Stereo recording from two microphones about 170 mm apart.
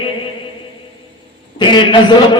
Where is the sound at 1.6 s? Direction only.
30° left (ahead or behind).